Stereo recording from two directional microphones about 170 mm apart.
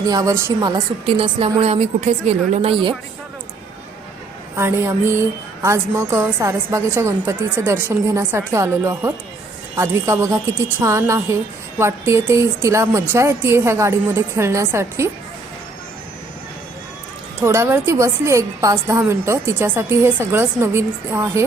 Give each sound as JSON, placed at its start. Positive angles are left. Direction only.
{"t": 0.1, "sound": "speech", "side_deg": -20}
{"t": 1.0, "sound": "a woman's voice", "side_deg": -35}
{"t": 4.5, "sound": "a woman's voice", "side_deg": -15}
{"t": 17.4, "sound": "a woman's voice", "side_deg": -15}